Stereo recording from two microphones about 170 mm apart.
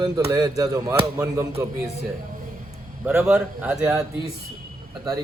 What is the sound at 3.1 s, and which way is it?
Speech, 15° right (ahead or behind).